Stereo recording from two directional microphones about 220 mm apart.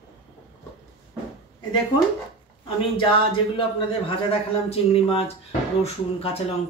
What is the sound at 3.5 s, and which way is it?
A man's voice, 25° left (ahead or behind).